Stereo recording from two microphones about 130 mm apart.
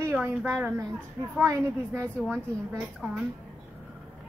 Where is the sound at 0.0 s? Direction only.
15° right (ahead or behind).